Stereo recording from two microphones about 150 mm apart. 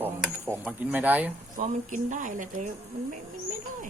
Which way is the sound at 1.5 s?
60° right (ahead or behind).